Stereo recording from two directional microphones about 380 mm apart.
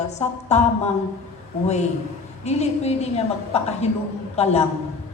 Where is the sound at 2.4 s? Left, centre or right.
Centre.